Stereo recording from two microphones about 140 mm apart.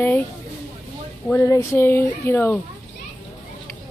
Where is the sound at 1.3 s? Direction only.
20° left (ahead or behind).